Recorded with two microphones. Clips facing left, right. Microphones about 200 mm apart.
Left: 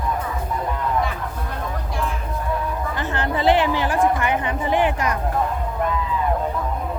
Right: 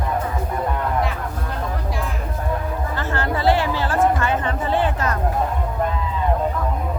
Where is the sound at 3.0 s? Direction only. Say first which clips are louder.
Even; 20° left (ahead or behind).